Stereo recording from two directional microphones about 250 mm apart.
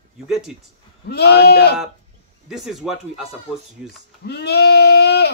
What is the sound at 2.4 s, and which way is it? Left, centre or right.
Speech, centre.